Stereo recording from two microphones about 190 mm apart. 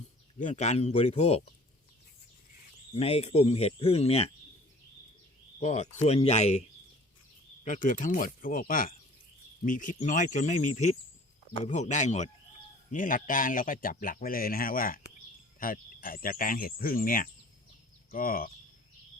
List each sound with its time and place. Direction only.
0.3 s speech: 40° left (ahead or behind)
2.9 s speech: 30° left (ahead or behind)
5.5 s speech: 35° left (ahead or behind)